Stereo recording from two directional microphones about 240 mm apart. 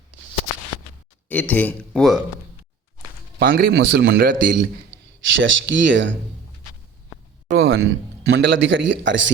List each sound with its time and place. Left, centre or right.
1.3 s speech: centre
3.3 s a man's voice: right
7.5 s a man's voice: right